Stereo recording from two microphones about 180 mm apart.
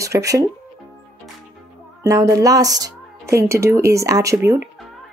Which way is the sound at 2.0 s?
15° right (ahead or behind).